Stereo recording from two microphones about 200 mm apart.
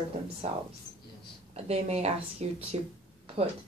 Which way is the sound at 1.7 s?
30° right (ahead or behind).